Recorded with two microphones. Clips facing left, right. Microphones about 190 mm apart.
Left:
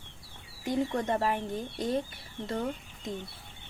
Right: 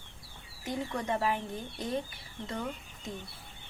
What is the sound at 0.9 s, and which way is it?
Speech, 40° left (ahead or behind).